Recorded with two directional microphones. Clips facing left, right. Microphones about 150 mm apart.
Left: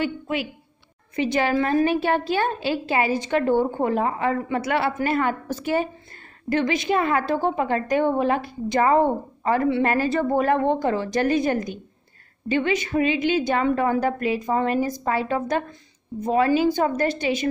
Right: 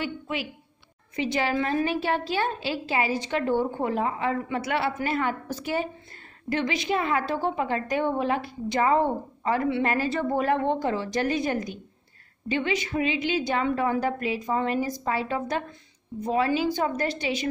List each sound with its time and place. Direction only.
0.0 s a woman's voice: 50° left (ahead or behind)